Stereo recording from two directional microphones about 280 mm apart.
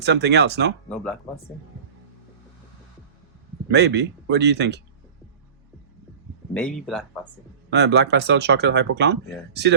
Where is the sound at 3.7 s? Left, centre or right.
Right.